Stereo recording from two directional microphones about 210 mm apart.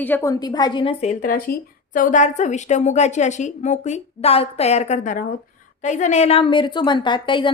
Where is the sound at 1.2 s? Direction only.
40° left (ahead or behind).